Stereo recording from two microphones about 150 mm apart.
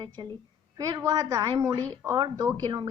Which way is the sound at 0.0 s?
25° right (ahead or behind).